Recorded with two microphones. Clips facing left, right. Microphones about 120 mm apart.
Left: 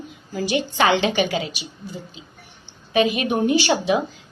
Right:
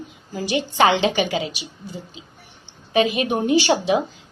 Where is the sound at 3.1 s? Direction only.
30° right (ahead or behind).